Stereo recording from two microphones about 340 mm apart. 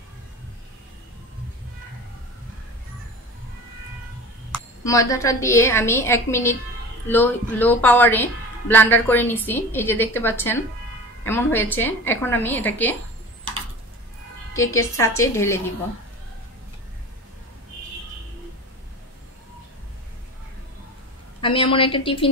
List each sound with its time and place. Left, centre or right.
4.8 s a woman's voice: centre
15.0 s a woman's voice: centre
21.4 s a woman's voice: centre